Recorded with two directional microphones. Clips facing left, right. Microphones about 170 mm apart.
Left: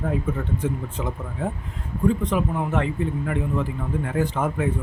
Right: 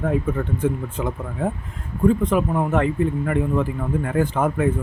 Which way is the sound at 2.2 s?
50° right (ahead or behind).